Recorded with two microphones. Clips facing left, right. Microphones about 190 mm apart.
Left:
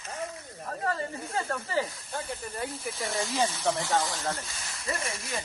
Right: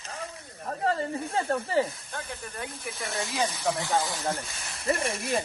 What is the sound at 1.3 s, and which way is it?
Speech, 30° right (ahead or behind).